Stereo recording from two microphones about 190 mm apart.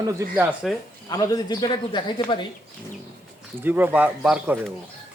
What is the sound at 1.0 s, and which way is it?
Speech, 20° left (ahead or behind).